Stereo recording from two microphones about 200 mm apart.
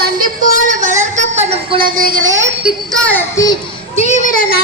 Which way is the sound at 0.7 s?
40° right (ahead or behind).